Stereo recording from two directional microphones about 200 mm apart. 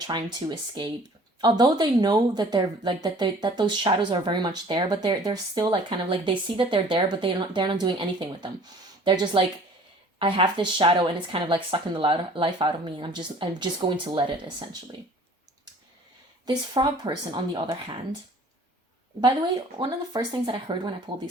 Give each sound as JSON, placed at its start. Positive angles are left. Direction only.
{"t": 0.1, "sound": "speech", "side_deg": -20}
{"t": 16.5, "sound": "speech", "side_deg": -20}
{"t": 19.8, "sound": "speech", "side_deg": -20}